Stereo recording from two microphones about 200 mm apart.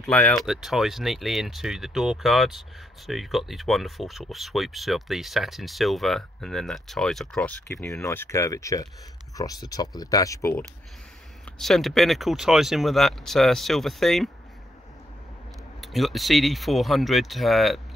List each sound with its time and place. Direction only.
0.0 s speech: centre (ahead or behind)
7.6 s speech: 15° left (ahead or behind)
11.5 s speech: centre (ahead or behind)
15.8 s speech: centre (ahead or behind)